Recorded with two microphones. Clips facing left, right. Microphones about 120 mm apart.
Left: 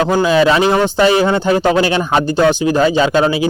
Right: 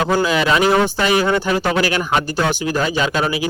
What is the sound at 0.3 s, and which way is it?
Speech, 30° left (ahead or behind).